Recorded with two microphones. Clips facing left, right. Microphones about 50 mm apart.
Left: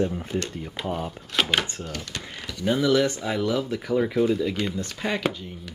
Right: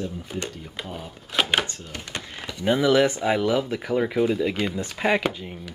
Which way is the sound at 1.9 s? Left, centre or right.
Right.